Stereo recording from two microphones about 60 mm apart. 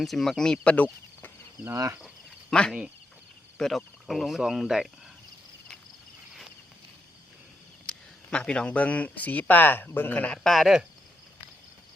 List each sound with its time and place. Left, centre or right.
0.0 s speech: centre
0.6 s speech: left
1.7 s speech: right
2.5 s speech: centre
7.9 s speech: centre
10.3 s speech: centre
10.6 s speech: centre